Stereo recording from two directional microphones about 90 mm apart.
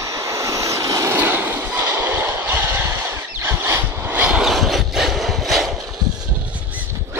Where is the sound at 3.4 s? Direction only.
25° right (ahead or behind).